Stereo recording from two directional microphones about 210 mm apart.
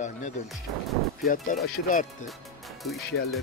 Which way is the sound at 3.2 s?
70° left (ahead or behind).